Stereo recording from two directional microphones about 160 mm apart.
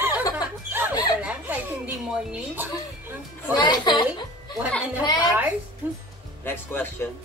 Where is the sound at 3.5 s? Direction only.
25° left (ahead or behind).